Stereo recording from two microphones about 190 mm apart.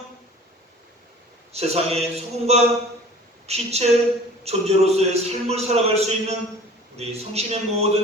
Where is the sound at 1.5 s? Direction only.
35° right (ahead or behind).